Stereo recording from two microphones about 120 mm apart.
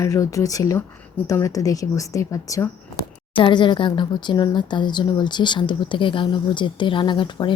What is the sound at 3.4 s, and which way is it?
Speech, 45° left (ahead or behind).